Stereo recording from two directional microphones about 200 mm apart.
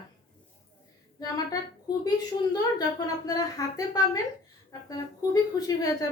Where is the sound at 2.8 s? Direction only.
20° left (ahead or behind).